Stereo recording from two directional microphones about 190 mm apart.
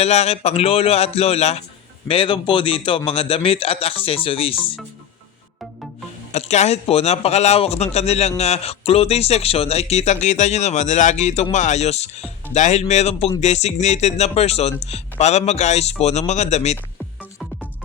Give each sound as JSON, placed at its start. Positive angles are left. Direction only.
{"t": 0.0, "sound": "a man's voice", "side_deg": 35}
{"t": 6.3, "sound": "speech", "side_deg": 35}